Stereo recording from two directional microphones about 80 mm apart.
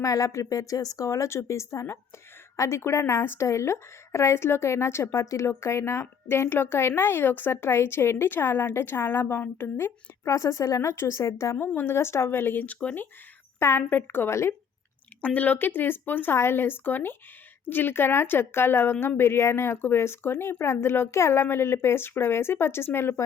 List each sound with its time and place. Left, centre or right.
0.0 s a woman's voice: left
11.5 s a woman's voice: left
13.6 s speech: left
15.2 s a woman's voice: centre